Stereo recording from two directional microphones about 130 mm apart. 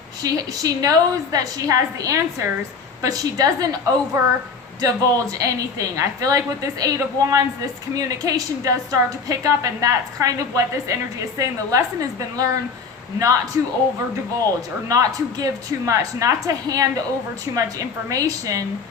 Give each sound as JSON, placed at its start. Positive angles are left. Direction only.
{"t": 0.2, "sound": "a woman's voice", "side_deg": -30}
{"t": 14.8, "sound": "a woman's voice", "side_deg": -25}